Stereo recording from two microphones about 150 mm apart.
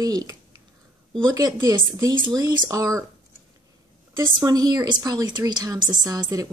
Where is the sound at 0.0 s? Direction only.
25° right (ahead or behind).